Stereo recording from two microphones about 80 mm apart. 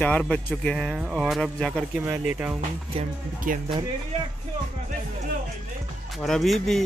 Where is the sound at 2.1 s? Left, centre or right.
Centre.